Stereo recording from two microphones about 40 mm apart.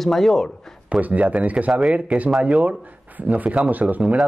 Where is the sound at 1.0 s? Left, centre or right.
Right.